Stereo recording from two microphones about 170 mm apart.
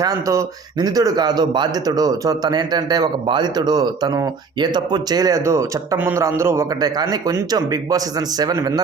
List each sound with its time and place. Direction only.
0.0 s speech: 20° right (ahead or behind)